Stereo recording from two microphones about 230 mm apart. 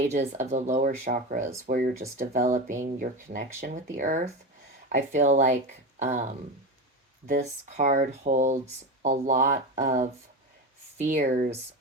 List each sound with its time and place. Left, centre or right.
0.0 s speech: right